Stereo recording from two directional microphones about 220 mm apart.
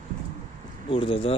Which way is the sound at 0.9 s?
25° left (ahead or behind).